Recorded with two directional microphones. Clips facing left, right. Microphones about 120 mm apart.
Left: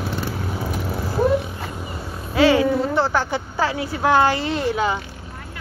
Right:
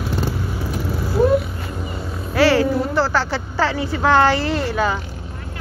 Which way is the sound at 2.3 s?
20° left (ahead or behind).